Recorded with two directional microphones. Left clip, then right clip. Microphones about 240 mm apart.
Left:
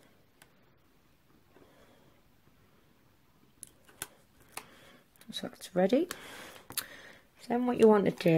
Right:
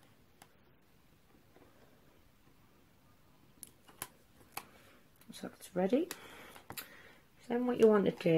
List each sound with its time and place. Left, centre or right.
5.3 s speech: left
6.3 s a sound: left
7.4 s speech: left